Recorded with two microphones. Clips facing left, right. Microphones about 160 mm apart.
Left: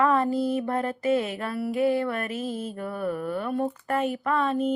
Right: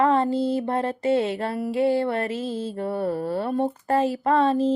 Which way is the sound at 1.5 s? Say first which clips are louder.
Left 2 dB; 45° right (ahead or behind).